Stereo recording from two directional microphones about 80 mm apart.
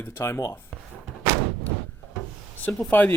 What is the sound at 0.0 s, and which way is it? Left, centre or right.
Speech, left.